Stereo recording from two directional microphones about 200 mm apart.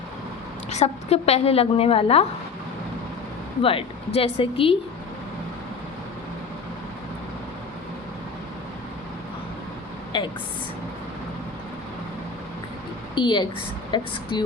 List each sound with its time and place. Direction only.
0.7 s a woman's voice: 30° left (ahead or behind)
3.6 s a woman's voice: 25° left (ahead or behind)
10.1 s a woman's voice: 25° left (ahead or behind)
13.1 s a woman's voice: 25° left (ahead or behind)